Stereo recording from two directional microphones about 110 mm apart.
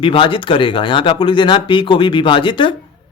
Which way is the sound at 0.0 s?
50° left (ahead or behind).